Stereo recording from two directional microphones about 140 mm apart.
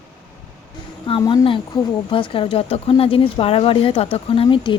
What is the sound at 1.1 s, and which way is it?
Speech, 35° left (ahead or behind).